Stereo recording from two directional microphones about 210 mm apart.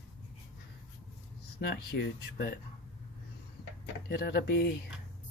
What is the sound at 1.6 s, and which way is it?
Speech, 50° left (ahead or behind).